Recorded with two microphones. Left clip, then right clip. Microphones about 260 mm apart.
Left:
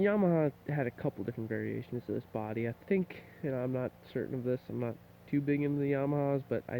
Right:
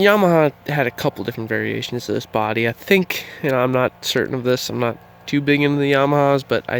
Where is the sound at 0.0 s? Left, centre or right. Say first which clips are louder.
Right 16 dB; centre.